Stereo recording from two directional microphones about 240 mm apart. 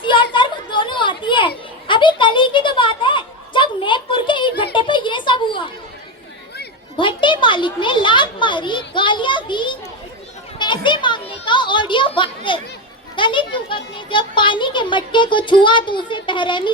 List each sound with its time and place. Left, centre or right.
0.0 s children playing: left
6.9 s speech: left
10.6 s a sound: centre
13.1 s a child's voice: left